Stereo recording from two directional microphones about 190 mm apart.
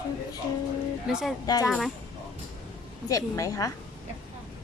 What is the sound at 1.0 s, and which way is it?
Speech, 5° right (ahead or behind).